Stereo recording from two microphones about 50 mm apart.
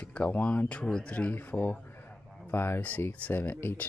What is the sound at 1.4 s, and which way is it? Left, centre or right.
Speech, left.